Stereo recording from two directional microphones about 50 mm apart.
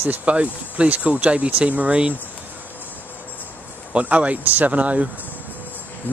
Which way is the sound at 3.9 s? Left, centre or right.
Right.